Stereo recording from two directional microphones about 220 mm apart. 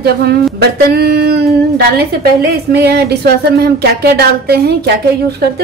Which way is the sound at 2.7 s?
45° right (ahead or behind).